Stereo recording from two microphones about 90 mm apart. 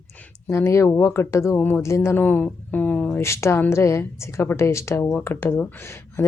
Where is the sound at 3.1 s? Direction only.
30° left (ahead or behind).